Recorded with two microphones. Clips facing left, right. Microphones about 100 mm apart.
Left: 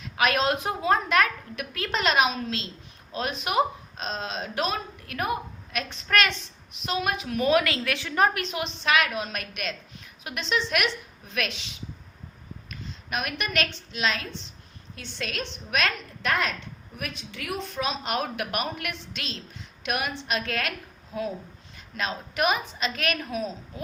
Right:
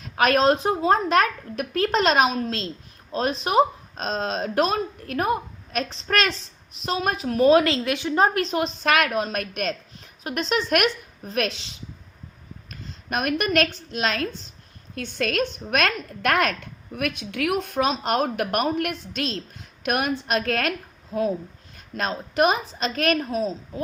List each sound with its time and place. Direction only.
0.0 s a woman's voice: 40° right (ahead or behind)
12.7 s a woman's voice: 45° right (ahead or behind)
17.9 s a woman's voice: 40° right (ahead or behind)